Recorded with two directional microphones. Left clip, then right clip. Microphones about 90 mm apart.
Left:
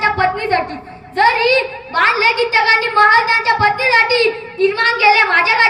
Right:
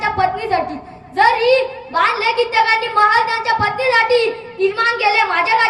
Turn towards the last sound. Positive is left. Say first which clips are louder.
# left 3 dB
turn(degrees=-20)  # may be behind; listen again after turning